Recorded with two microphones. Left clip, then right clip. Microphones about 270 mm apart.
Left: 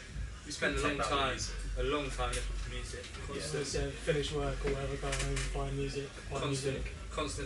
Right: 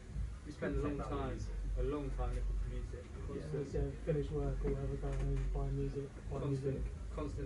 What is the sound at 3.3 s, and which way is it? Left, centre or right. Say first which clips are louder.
A man's voice: left 5 dB; centre.